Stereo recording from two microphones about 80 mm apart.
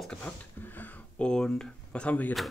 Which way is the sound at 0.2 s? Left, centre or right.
Left.